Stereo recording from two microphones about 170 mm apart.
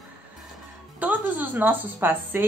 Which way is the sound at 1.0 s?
10° right (ahead or behind).